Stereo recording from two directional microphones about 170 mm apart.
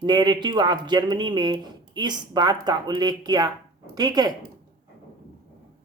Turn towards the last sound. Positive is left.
turn(degrees=-25)  # may be behind; listen again after turning